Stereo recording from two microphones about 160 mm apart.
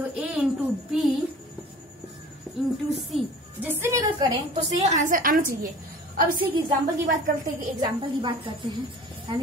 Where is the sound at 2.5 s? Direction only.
Centre (ahead or behind).